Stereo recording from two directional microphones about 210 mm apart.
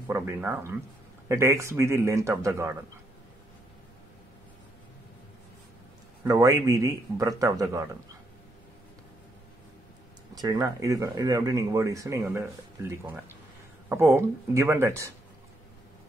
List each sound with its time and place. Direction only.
0.1 s speech: 10° right (ahead or behind)
6.2 s speech: 15° right (ahead or behind)
10.4 s speech: 15° right (ahead or behind)